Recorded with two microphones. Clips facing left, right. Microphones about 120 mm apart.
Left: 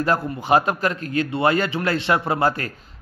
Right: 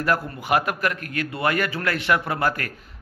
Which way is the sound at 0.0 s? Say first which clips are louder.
Left 2 dB; 25° left (ahead or behind).